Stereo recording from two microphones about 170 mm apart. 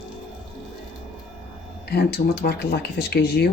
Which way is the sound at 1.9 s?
75° left (ahead or behind).